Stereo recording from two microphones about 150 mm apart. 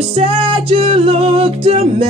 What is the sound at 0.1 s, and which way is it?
Music, 40° right (ahead or behind).